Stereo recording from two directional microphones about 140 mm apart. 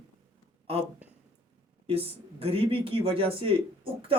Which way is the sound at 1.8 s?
45° right (ahead or behind).